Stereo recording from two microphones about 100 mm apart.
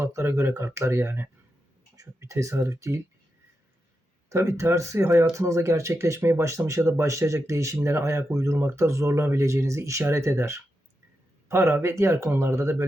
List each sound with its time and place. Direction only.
0.0 s speech: 30° right (ahead or behind)
4.3 s speech: 30° right (ahead or behind)